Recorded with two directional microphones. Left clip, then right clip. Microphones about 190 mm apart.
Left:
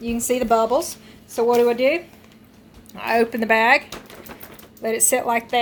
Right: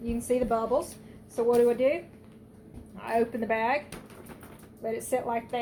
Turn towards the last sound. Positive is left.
turn(degrees=55)  # may be behind; listen again after turning